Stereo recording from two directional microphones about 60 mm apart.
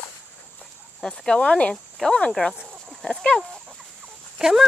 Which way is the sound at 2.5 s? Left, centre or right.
Right.